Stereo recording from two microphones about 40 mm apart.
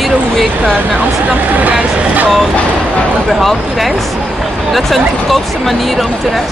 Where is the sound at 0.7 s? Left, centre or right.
Right.